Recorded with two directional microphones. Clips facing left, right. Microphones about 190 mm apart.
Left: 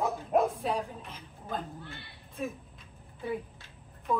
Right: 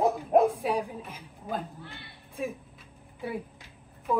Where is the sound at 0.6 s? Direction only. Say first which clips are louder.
Right 3 dB; 15° right (ahead or behind).